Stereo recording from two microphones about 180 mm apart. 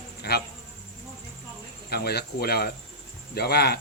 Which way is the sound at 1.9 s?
60° left (ahead or behind).